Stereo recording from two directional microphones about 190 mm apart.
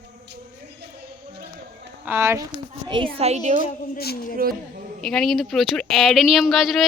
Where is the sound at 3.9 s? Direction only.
55° left (ahead or behind).